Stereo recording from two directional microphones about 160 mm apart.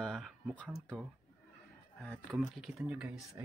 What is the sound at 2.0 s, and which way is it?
Speech, 5° left (ahead or behind).